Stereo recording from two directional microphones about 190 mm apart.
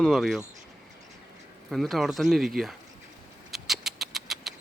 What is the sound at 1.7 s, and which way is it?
Speech, centre (ahead or behind).